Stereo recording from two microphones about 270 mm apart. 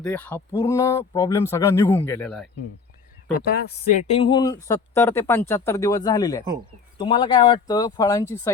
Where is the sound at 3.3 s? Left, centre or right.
Left.